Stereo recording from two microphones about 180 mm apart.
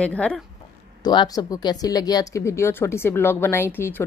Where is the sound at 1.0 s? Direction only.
25° left (ahead or behind).